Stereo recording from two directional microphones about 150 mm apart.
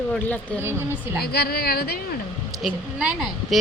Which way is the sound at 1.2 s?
90° left.